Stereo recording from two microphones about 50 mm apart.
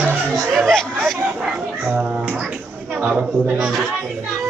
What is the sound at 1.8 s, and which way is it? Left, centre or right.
A woman's voice, right.